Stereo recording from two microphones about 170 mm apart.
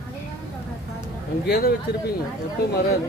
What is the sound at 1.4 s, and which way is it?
Speech, 70° left (ahead or behind).